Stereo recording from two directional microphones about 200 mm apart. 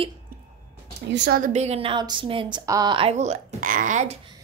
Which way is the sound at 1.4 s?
35° right (ahead or behind).